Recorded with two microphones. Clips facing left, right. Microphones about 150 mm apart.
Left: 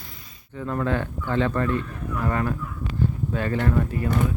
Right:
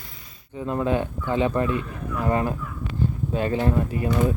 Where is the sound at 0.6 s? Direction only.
20° right (ahead or behind).